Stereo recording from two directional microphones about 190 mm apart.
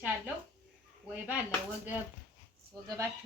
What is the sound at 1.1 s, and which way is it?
Speech, 10° right (ahead or behind).